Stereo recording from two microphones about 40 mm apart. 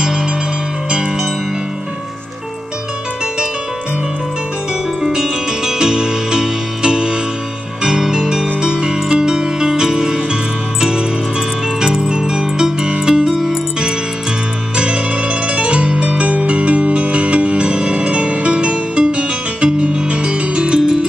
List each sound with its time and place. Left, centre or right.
0.0 s music: centre
5.0 s music: centre
14.8 s music: right